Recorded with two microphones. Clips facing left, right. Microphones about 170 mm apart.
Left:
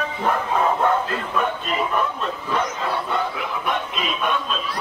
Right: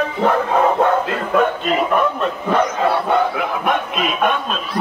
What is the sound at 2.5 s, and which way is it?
Bow-wow, 65° right (ahead or behind).